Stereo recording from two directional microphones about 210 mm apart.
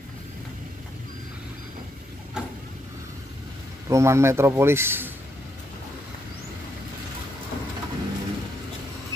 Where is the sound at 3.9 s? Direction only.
15° right (ahead or behind).